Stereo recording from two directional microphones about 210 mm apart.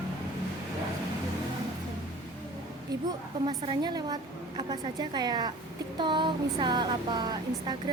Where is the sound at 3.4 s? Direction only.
20° right (ahead or behind).